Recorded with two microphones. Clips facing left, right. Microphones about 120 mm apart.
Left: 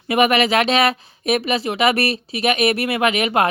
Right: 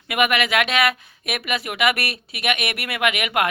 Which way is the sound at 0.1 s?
35° left (ahead or behind).